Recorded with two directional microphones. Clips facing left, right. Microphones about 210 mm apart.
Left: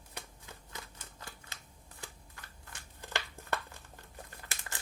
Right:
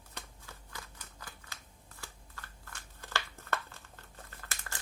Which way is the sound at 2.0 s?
15° left (ahead or behind).